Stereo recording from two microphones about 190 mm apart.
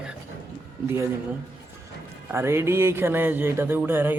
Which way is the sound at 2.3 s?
15° right (ahead or behind).